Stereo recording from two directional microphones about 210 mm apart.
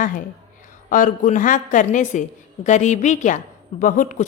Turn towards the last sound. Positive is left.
turn(degrees=40)  # may be behind; listen again after turning